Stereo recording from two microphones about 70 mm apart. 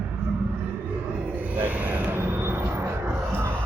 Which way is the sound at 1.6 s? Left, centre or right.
Right.